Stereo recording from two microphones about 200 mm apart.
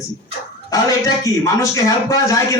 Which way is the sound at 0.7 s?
15° left (ahead or behind).